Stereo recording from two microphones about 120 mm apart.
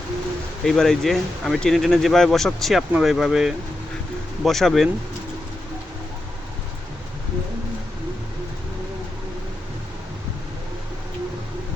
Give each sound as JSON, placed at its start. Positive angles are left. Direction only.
{"t": 0.6, "sound": "speech", "side_deg": 0}